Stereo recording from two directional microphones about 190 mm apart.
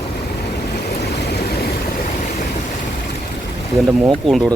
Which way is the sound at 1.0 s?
60° left (ahead or behind).